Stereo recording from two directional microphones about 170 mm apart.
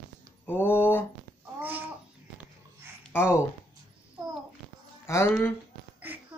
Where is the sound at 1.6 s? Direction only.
10° right (ahead or behind).